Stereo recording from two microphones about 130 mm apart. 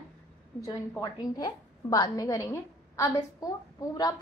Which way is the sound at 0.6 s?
25° left (ahead or behind).